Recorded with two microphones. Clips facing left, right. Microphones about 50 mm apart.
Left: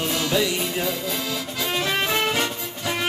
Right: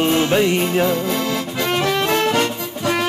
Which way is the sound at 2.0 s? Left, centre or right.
Right.